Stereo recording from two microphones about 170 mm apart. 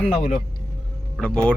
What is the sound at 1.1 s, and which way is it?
Speech, 5° left (ahead or behind).